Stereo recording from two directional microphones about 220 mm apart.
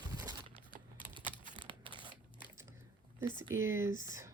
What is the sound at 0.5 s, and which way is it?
Typing, 20° left (ahead or behind).